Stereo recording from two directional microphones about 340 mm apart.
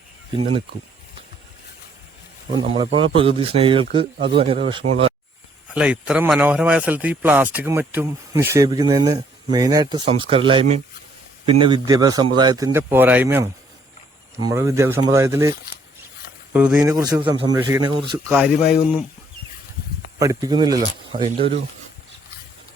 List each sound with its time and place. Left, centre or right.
0.3 s speech: centre
2.5 s speech: centre
5.7 s speech: centre
18.3 s speech: centre
20.1 s speech: centre